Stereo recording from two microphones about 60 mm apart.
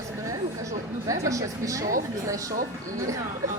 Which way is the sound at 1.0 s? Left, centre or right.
Right.